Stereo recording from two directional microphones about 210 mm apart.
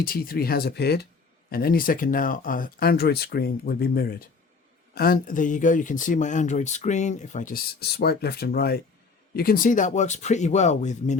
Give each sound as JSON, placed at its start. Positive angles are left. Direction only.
{"t": 0.0, "sound": "speech", "side_deg": 45}